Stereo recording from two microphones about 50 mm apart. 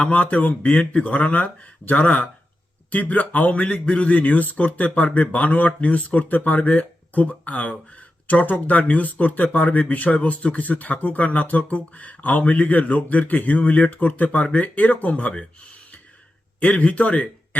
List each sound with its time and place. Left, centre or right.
0.0 s a man's voice: left
16.6 s speech: left